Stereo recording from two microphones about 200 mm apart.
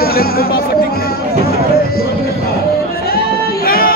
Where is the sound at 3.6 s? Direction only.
50° left (ahead or behind).